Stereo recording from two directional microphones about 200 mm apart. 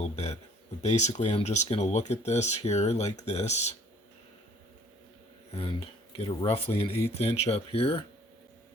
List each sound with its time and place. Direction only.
0.0 s a sound: 35° left (ahead or behind)
0.8 s speech: 35° left (ahead or behind)
6.2 s speech: 25° left (ahead or behind)